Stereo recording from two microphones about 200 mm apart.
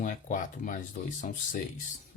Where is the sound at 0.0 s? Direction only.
40° left (ahead or behind).